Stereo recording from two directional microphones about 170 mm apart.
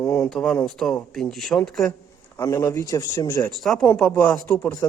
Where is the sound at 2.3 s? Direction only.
20° left (ahead or behind).